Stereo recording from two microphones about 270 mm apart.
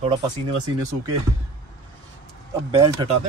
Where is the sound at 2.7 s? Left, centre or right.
Centre.